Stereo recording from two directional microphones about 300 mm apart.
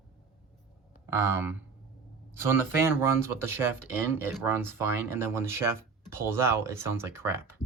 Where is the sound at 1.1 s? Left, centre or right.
Centre.